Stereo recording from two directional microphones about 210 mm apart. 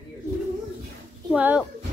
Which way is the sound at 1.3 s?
5° right (ahead or behind).